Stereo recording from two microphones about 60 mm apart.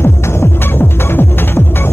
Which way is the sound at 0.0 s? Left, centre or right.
Left.